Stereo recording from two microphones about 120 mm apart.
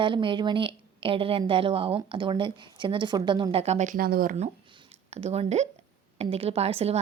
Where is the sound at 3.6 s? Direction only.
70° right (ahead or behind).